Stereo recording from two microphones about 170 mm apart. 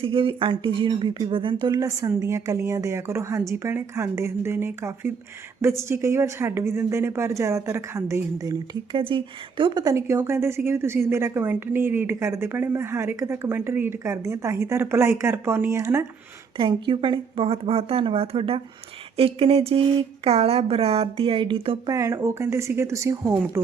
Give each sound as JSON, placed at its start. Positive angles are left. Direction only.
{"t": 0.0, "sound": "speech", "side_deg": -30}
{"t": 16.6, "sound": "speech", "side_deg": -30}
{"t": 21.8, "sound": "speech", "side_deg": -20}